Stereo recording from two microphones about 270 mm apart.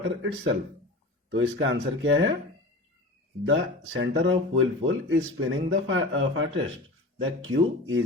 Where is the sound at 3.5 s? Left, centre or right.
Right.